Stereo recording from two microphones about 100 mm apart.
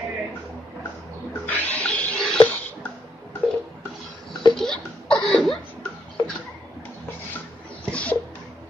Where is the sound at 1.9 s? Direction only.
5° left (ahead or behind).